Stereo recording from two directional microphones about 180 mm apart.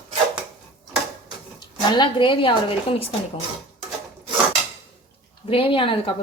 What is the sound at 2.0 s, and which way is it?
A woman's voice, 25° left (ahead or behind).